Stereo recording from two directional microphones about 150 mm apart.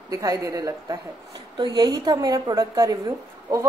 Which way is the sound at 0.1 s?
20° right (ahead or behind).